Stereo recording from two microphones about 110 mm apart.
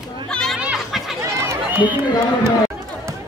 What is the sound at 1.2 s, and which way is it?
Run, 20° right (ahead or behind).